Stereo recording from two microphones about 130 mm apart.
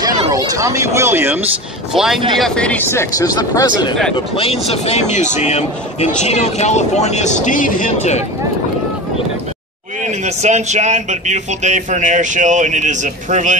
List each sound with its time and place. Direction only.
0.3 s speech: 25° right (ahead or behind)
2.0 s speech: 5° right (ahead or behind); by 3.9 s 30° left (ahead or behind)
4.4 s a man's voice: 50° left (ahead or behind)
7.4 s speech: 90° left; by 8.2 s 70° left (ahead or behind)
10.0 s a man's voice: 60° right (ahead or behind)